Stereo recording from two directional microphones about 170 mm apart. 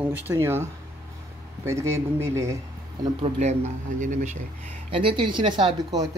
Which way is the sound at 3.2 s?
40° right (ahead or behind).